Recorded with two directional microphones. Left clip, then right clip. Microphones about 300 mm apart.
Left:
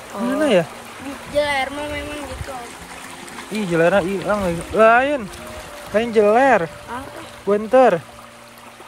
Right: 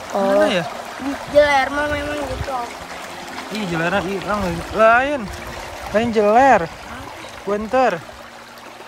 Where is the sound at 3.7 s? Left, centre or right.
Centre.